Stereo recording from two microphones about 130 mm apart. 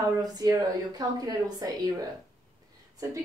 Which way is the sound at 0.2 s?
30° right (ahead or behind).